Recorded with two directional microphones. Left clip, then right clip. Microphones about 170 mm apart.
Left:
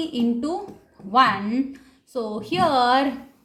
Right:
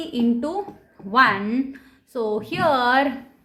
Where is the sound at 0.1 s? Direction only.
35° right (ahead or behind).